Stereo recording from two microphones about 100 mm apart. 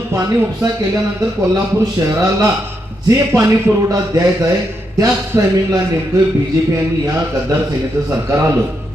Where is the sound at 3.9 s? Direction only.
35° right (ahead or behind).